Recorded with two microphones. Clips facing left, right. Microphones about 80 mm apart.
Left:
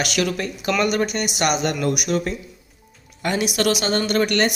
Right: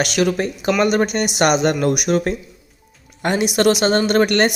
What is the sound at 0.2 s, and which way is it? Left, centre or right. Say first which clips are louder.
Speech: right 5 dB; right.